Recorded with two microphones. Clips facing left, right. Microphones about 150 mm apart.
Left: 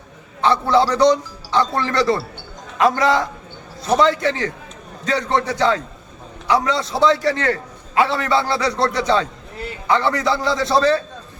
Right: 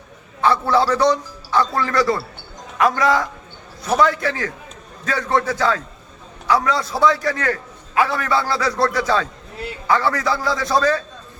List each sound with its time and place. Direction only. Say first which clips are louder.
0.4 s a man's voice: left 1 dB; 20° left (ahead or behind)